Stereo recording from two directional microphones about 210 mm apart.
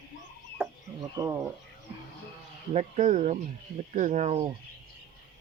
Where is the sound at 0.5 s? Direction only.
15° right (ahead or behind).